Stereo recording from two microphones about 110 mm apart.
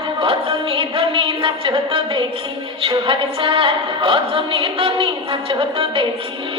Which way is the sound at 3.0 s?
50° right (ahead or behind).